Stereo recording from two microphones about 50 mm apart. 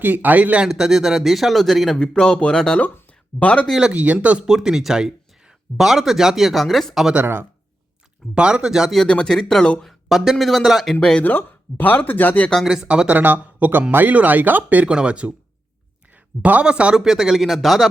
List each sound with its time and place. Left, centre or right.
0.0 s speech: right
0.7 s speech: centre
2.0 s speech: centre
3.9 s speech: right
4.4 s speech: centre
8.4 s speech: centre
9.0 s speech: centre
9.8 s speech: centre
11.2 s speech: left
12.6 s speech: centre
13.1 s speech: right
14.8 s speech: right
16.4 s speech: right
16.9 s speech: centre